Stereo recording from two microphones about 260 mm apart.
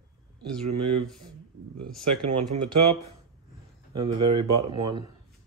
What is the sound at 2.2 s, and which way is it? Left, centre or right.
Speech, right.